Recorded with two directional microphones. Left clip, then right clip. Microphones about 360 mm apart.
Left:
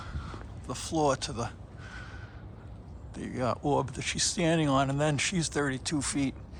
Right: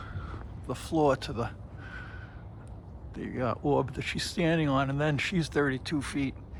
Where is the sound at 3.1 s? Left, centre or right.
Centre.